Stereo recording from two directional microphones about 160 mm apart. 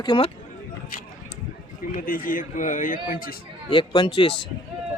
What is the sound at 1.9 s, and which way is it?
A man's voice, 60° left (ahead or behind).